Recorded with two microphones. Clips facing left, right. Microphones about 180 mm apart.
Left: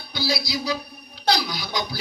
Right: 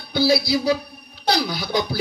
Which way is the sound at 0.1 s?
55° right (ahead or behind).